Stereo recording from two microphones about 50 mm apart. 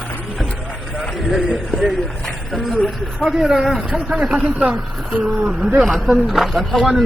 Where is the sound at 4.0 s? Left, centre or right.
Centre.